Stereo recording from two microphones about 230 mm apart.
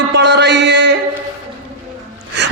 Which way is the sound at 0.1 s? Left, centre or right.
Right.